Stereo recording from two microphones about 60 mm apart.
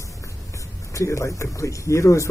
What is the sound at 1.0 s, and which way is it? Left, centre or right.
Speech, left.